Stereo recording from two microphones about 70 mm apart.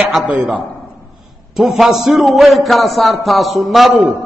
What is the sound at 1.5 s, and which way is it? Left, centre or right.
A man's voice, centre.